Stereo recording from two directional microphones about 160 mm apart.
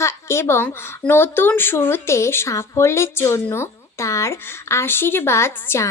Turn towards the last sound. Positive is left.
turn(degrees=15)  # may be behind; listen again after turning